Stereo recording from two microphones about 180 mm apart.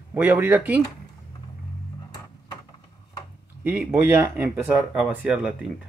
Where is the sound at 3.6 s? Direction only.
10° right (ahead or behind).